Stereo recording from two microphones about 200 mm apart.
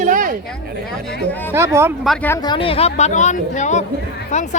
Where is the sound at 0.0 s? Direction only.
40° right (ahead or behind).